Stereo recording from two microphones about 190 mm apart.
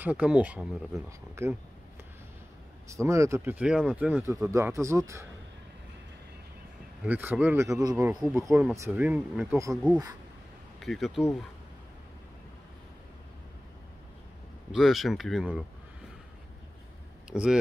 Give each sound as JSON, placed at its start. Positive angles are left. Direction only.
{"t": 0.0, "sound": "speech", "side_deg": -5}
{"t": 2.9, "sound": "speech", "side_deg": -15}
{"t": 7.0, "sound": "speech", "side_deg": -10}
{"t": 8.4, "sound": "speech", "side_deg": -10}
{"t": 10.8, "sound": "speech", "side_deg": 0}
{"t": 14.7, "sound": "speech", "side_deg": 0}
{"t": 17.3, "sound": "speech", "side_deg": -5}